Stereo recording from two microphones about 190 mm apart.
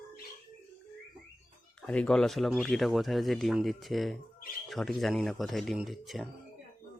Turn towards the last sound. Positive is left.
turn(degrees=0)  # may be behind; listen again after turning